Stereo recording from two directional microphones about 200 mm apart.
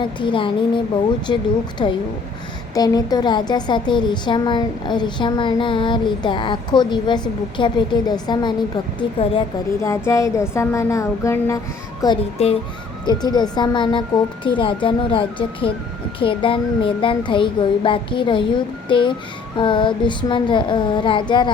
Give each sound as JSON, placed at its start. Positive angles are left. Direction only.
{"t": 0.0, "sound": "a woman's voice", "side_deg": 25}
{"t": 12.0, "sound": "a woman's voice", "side_deg": 25}